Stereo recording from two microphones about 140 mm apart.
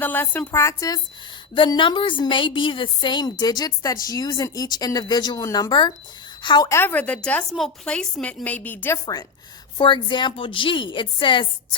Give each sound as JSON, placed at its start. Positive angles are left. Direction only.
{"t": 0.0, "sound": "speech", "side_deg": 15}
{"t": 1.5, "sound": "a woman's voice", "side_deg": 35}
{"t": 6.7, "sound": "speech", "side_deg": 15}
{"t": 9.7, "sound": "a woman's voice", "side_deg": 35}